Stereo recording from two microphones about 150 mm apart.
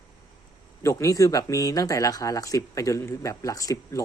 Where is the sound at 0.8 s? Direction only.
20° left (ahead or behind).